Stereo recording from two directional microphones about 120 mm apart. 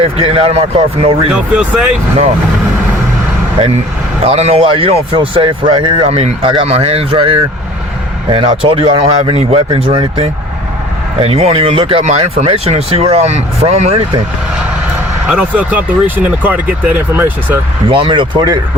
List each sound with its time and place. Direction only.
0.0 s speech: 55° right (ahead or behind)
1.3 s speech: 10° right (ahead or behind)
4.2 s speech: 60° right (ahead or behind); by 6.1 s 40° right (ahead or behind)
6.1 s speech: 55° right (ahead or behind)
15.3 s speech: 10° right (ahead or behind)
17.8 s speech: 45° right (ahead or behind)